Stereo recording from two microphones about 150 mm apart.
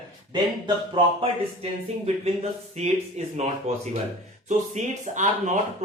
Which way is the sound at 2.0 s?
45° right (ahead or behind).